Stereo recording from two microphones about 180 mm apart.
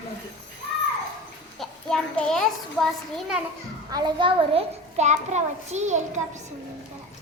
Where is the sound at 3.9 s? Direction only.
20° right (ahead or behind).